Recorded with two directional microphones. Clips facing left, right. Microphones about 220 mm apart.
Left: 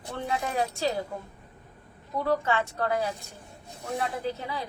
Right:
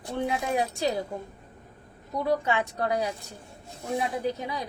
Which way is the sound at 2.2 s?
15° right (ahead or behind).